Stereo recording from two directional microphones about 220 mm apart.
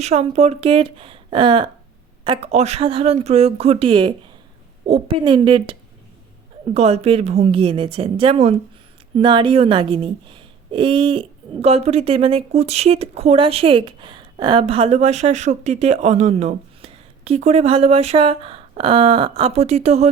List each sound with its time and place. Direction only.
0.0 s speech: 30° right (ahead or behind)
6.7 s speech: 30° right (ahead or behind)